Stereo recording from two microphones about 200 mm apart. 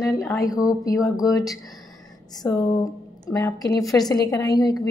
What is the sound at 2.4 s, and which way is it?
A woman's voice, 15° left (ahead or behind).